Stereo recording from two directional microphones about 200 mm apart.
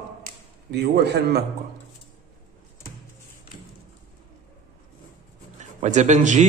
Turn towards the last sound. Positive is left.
turn(degrees=-35)  # may be behind; listen again after turning